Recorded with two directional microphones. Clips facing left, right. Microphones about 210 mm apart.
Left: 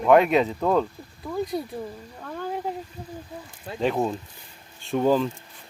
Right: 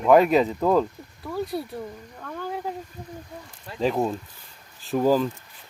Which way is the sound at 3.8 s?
Centre (ahead or behind).